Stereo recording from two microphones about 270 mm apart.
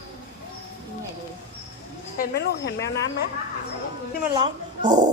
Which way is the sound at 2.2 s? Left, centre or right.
Left.